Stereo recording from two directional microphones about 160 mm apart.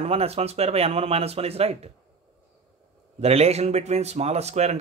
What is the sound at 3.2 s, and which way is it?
Speech, 40° right (ahead or behind).